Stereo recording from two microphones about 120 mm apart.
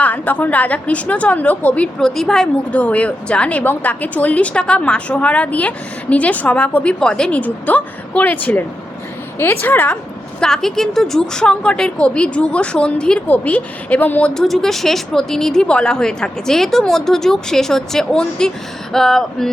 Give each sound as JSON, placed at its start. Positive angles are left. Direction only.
{"t": 0.0, "sound": "a woman's voice", "side_deg": 15}